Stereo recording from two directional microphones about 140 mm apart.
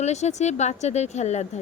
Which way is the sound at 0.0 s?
55° left (ahead or behind).